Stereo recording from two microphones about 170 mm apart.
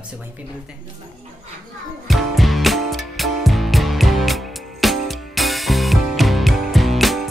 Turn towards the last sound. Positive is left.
turn(degrees=0)  # may be behind; listen again after turning